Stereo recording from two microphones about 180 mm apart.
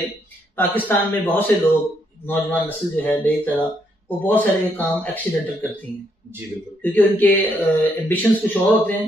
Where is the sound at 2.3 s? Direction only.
10° left (ahead or behind).